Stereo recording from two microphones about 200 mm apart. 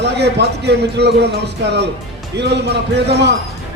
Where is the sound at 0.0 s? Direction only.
55° right (ahead or behind).